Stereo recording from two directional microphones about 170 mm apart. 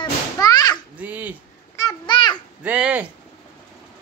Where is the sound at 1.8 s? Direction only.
25° left (ahead or behind).